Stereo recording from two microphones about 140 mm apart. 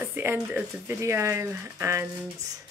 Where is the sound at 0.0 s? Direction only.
15° right (ahead or behind).